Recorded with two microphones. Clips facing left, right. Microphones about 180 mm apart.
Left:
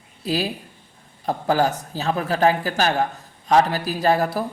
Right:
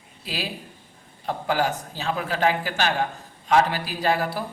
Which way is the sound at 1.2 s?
40° left (ahead or behind).